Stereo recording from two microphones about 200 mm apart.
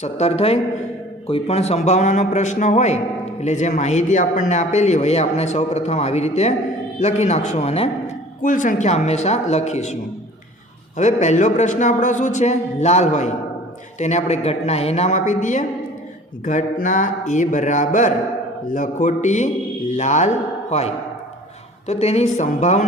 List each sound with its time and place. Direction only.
0.0 s a man's voice: 30° left (ahead or behind)
16.8 s a man's voice: 40° left (ahead or behind)